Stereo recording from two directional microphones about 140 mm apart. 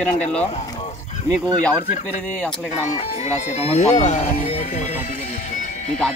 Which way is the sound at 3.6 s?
50° left (ahead or behind).